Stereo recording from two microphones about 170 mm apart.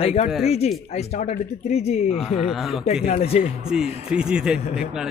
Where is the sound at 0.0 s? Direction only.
40° left (ahead or behind).